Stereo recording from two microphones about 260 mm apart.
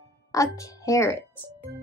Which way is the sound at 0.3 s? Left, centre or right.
Centre.